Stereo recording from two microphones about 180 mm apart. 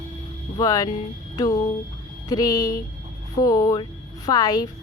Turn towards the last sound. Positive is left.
turn(degrees=20)  # may be behind; listen again after turning